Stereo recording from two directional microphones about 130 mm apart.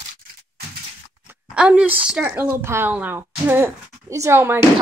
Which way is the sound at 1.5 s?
5° right (ahead or behind).